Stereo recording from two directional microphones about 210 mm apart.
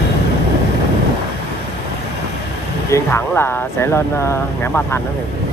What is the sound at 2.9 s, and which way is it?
Speech, 10° left (ahead or behind).